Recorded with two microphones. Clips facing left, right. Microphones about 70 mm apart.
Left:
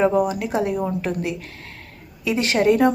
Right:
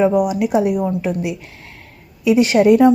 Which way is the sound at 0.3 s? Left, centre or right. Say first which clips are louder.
Right 6 dB; centre.